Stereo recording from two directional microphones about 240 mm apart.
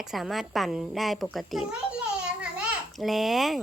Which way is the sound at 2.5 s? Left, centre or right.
Centre.